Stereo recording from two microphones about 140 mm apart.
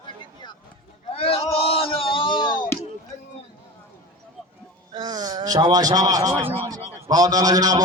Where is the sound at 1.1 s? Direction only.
45° left (ahead or behind).